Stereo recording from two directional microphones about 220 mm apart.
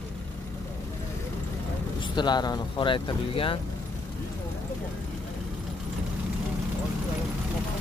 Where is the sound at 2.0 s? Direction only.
20° left (ahead or behind).